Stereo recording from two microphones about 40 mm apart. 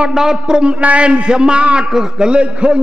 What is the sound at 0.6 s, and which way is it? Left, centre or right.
A man's voice, right.